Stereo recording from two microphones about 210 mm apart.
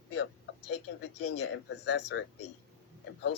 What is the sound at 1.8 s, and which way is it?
Speech, 55° left (ahead or behind).